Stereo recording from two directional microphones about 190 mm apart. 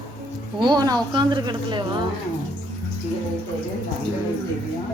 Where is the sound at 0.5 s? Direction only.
25° right (ahead or behind).